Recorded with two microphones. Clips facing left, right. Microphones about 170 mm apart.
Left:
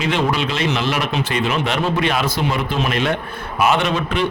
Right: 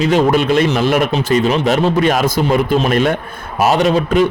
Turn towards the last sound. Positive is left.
turn(degrees=-40)  # may be behind; listen again after turning